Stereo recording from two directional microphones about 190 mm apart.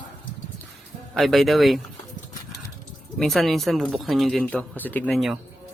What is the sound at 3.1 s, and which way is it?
Speech, centre (ahead or behind).